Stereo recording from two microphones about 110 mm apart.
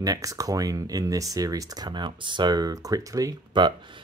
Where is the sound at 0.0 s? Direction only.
35° right (ahead or behind).